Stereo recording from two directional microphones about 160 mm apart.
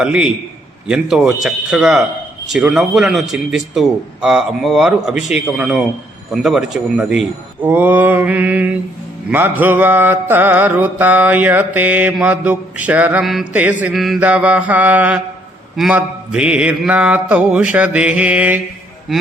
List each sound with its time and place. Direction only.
0.0 s a man's voice: 5° right (ahead or behind)
6.3 s mantra: centre (ahead or behind)
19.1 s a man's voice: centre (ahead or behind)